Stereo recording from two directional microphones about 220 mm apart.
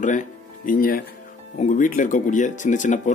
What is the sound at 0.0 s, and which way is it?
A man's voice, 35° left (ahead or behind).